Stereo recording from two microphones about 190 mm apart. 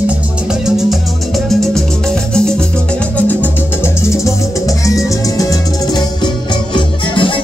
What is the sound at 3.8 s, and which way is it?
Music, 15° left (ahead or behind).